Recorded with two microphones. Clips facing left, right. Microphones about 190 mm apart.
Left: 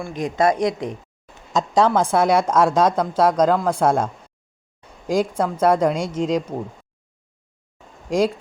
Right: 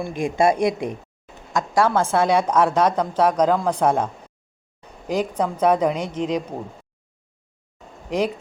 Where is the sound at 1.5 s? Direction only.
15° left (ahead or behind).